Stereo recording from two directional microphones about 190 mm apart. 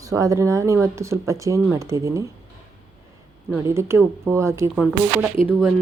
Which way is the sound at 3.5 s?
15° right (ahead or behind).